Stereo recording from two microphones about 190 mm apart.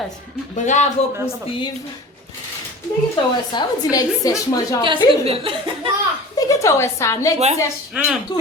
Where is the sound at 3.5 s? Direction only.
20° left (ahead or behind).